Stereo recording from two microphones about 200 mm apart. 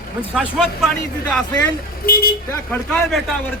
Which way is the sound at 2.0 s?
50° left (ahead or behind).